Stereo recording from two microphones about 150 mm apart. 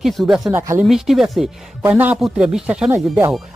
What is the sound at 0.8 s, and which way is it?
Speech, centre (ahead or behind).